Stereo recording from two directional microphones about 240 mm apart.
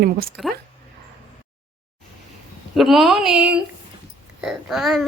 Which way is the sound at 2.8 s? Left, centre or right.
Centre.